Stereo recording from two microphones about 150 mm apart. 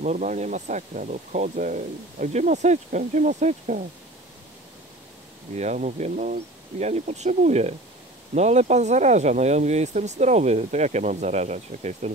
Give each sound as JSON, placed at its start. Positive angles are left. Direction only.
{"t": 0.0, "sound": "speech", "side_deg": -55}
{"t": 5.6, "sound": "speech", "side_deg": -50}